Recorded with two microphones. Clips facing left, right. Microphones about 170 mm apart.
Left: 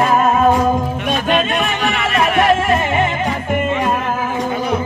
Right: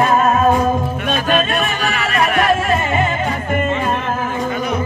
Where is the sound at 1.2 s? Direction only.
20° left (ahead or behind).